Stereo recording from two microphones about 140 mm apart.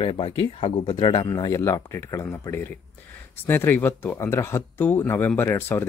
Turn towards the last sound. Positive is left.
turn(degrees=15)  # may be behind; listen again after turning